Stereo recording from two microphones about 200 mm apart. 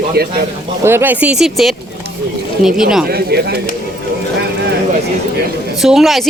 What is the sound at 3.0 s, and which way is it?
Speech, 50° right (ahead or behind).